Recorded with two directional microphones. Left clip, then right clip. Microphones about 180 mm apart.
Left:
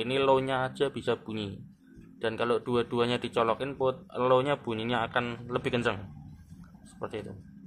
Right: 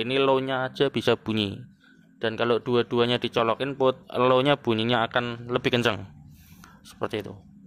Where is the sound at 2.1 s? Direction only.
30° right (ahead or behind).